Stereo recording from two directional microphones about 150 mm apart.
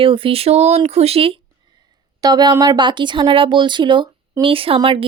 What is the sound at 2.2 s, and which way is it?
Speech, 25° right (ahead or behind).